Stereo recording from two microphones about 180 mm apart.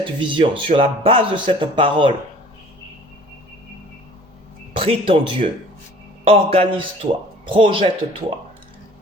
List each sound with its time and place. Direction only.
0.0 s speech: 30° right (ahead or behind)
4.7 s speech: 30° right (ahead or behind)